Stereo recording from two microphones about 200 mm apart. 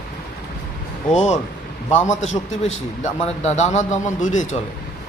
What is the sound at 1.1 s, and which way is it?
A man's voice, 35° left (ahead or behind).